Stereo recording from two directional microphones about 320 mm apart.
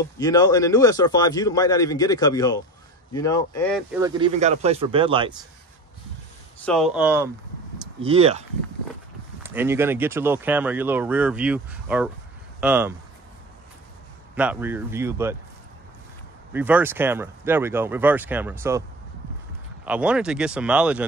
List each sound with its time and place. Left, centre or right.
0.2 s a man's voice: centre
4.0 s speech: centre
6.6 s speech: centre
8.0 s speech: centre
9.4 s speech: centre
14.3 s speech: centre
16.5 s speech: centre